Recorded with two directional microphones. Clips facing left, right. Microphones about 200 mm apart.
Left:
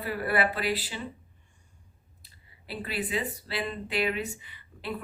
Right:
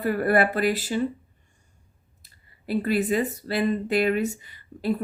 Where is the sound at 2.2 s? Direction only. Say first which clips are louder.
Left 1 dB; 45° right (ahead or behind).